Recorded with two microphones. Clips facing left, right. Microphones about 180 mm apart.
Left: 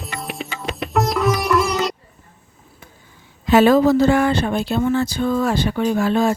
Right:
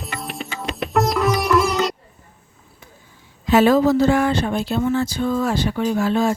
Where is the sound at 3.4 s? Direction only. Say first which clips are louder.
Left 2 dB; 65° left (ahead or behind).